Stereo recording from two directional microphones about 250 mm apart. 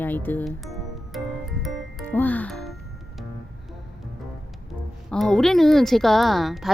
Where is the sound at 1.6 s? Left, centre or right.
Centre.